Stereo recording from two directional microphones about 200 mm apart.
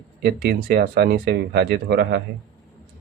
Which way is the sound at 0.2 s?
55° right (ahead or behind).